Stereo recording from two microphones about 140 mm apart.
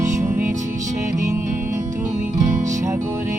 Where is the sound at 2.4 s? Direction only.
60° right (ahead or behind).